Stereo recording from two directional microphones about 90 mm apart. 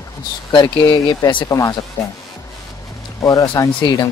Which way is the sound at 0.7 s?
55° left (ahead or behind).